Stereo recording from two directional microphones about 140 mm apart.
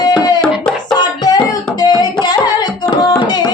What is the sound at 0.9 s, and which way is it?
Singing, 30° left (ahead or behind).